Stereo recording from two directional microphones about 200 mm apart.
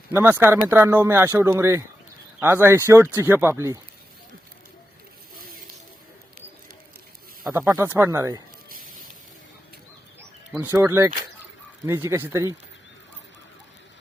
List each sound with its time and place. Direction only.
0.1 s speech: 10° right (ahead or behind)
7.5 s speech: 15° right (ahead or behind)
8.7 s spray: 45° right (ahead or behind)
10.5 s speech: 10° right (ahead or behind)